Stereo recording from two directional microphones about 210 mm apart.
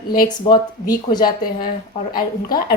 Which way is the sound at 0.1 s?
20° left (ahead or behind).